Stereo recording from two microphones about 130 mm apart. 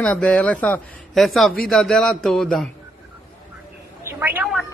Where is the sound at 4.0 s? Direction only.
20° right (ahead or behind).